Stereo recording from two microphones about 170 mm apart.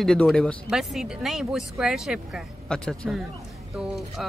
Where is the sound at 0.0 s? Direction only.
5° left (ahead or behind).